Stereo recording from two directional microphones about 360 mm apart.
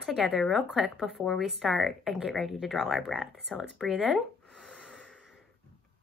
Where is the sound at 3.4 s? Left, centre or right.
Centre.